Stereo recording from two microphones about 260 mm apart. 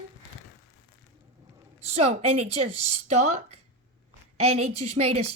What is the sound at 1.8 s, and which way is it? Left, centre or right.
A woman's voice, right.